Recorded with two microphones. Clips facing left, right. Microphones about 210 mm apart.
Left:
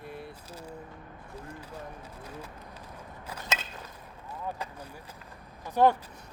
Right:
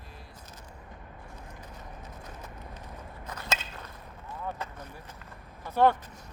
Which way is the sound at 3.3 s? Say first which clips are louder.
Even; centre (ahead or behind).